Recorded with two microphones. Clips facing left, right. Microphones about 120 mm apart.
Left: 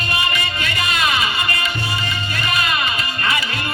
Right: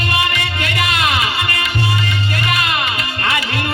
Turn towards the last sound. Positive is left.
turn(degrees=-70)  # may be behind; listen again after turning